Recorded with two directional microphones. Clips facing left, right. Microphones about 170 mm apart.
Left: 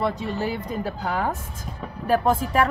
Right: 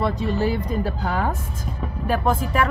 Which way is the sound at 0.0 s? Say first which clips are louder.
Right 3 dB; 20° left (ahead or behind).